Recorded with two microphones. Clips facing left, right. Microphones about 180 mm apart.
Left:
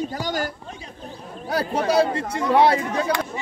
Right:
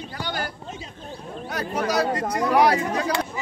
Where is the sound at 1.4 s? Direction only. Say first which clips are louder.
Left 4 dB; 30° left (ahead or behind).